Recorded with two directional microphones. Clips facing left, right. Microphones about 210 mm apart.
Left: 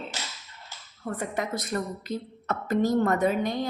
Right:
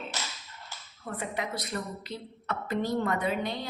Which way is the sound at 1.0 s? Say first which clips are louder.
Left 4 dB; 45° left (ahead or behind).